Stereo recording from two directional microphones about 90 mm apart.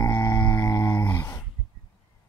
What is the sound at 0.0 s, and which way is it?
Music, 25° left (ahead or behind).